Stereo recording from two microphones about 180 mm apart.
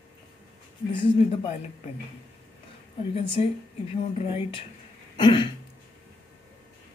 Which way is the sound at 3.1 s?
30° left (ahead or behind).